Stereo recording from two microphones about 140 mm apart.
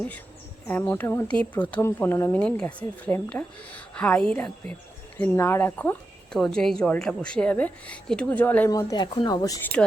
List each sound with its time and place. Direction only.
0.7 s a woman's voice: 15° left (ahead or behind)
6.3 s a woman's voice: 5° left (ahead or behind)
8.7 s speech: 25° left (ahead or behind)
9.8 s speech: centre (ahead or behind)